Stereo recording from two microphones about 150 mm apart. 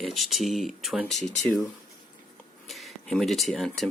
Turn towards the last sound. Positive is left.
turn(degrees=0)  # may be behind; listen again after turning